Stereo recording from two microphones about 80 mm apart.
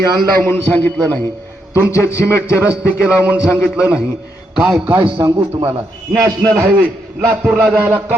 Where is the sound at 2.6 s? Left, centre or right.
Centre.